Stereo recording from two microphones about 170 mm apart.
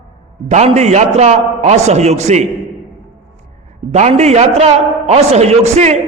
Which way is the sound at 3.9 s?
40° right (ahead or behind).